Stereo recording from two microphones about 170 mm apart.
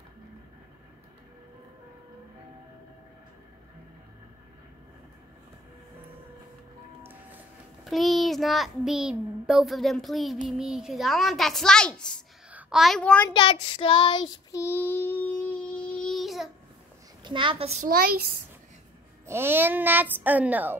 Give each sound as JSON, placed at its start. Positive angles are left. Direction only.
{"t": 7.0, "sound": "music", "side_deg": -10}
{"t": 7.8, "sound": "a child's voice", "side_deg": 0}
{"t": 12.4, "sound": "a woman's voice", "side_deg": -5}
{"t": 13.3, "sound": "child singing", "side_deg": 30}
{"t": 17.2, "sound": "a child's voice", "side_deg": -30}
{"t": 17.8, "sound": "a child's voice", "side_deg": -65}
{"t": 19.2, "sound": "speech", "side_deg": -15}